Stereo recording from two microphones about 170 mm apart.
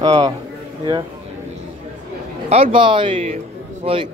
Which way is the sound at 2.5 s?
35° right (ahead or behind).